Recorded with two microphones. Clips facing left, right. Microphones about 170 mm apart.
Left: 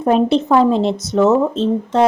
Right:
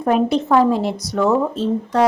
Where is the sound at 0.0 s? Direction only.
25° left (ahead or behind).